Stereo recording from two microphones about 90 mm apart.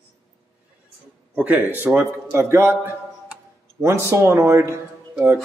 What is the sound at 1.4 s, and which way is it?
A man's voice, 20° right (ahead or behind).